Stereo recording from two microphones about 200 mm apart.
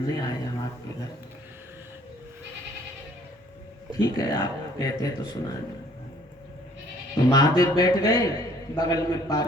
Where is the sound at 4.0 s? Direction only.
20° left (ahead or behind).